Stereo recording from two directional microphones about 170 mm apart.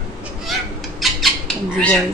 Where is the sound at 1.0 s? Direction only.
Centre (ahead or behind).